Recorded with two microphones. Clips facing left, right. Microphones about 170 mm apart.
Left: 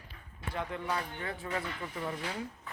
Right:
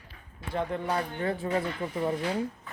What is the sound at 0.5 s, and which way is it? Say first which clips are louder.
Speech: right 6 dB; 30° right (ahead or behind).